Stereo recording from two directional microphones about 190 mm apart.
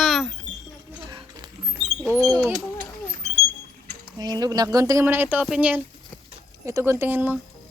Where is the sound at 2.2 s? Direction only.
15° right (ahead or behind).